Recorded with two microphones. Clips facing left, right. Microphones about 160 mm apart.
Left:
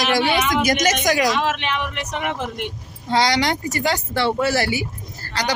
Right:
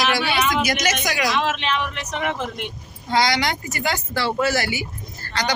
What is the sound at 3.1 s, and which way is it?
Speech, 35° left (ahead or behind).